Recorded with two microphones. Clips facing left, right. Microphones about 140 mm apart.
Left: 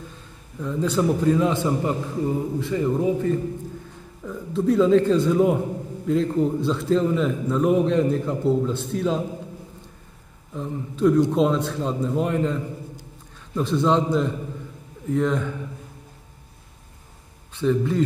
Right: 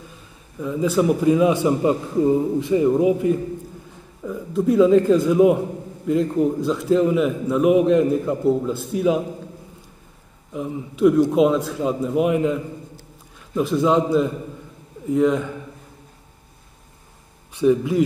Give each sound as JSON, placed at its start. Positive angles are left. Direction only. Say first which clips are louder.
{"t": 0.6, "sound": "a man's voice", "louder": "right 3 dB", "side_deg": -5}
{"t": 10.5, "sound": "a man's voice", "louder": "right 3 dB", "side_deg": -10}
{"t": 13.6, "sound": "a man's voice", "louder": "right 2 dB", "side_deg": -5}
{"t": 17.6, "sound": "a man's voice", "louder": "right 4 dB", "side_deg": -15}